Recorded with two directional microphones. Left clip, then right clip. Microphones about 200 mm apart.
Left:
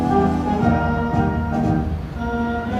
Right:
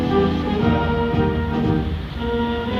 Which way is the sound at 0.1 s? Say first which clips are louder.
Left 1 dB; 50° left (ahead or behind).